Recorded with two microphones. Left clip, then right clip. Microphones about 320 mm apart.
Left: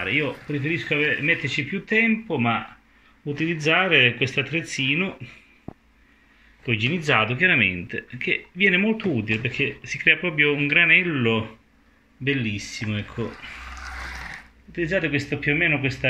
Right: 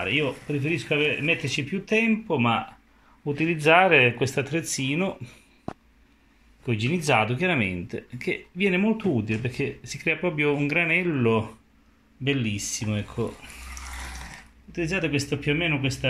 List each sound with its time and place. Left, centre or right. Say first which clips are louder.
0.0 s speech: left 1 dB; centre
3.9 s speech: left 1 dB; centre
6.6 s speech: left 4 dB; centre
14.7 s speech: left 3 dB; centre